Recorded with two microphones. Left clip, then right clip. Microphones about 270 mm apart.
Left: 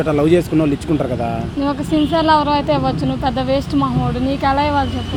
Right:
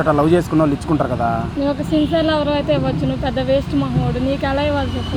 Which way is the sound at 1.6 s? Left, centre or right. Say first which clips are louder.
Left 2 dB; left.